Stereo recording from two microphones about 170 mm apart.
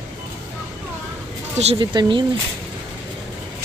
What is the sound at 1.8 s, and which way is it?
Speech, 25° right (ahead or behind).